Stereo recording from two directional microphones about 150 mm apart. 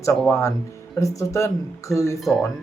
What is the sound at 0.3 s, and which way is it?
Speech, 20° left (ahead or behind).